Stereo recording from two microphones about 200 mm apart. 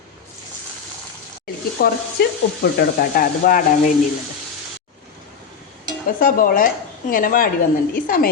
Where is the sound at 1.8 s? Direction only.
50° left (ahead or behind).